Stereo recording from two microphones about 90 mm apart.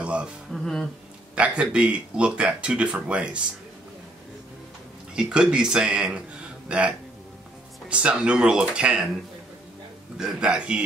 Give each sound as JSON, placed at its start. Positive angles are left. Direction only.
{"t": 0.0, "sound": "music", "side_deg": -15}
{"t": 0.5, "sound": "speech", "side_deg": 5}
{"t": 1.3, "sound": "speech", "side_deg": -10}
{"t": 5.1, "sound": "speech", "side_deg": -10}
{"t": 7.9, "sound": "speech", "side_deg": -10}
{"t": 10.1, "sound": "speech", "side_deg": -5}